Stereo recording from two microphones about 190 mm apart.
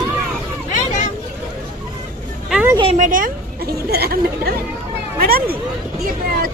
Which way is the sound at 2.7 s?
25° right (ahead or behind).